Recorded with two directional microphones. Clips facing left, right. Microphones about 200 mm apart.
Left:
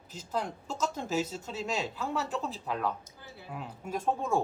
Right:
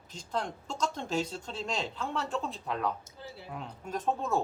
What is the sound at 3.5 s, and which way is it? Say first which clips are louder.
Speech: left 2 dB; 5° left (ahead or behind).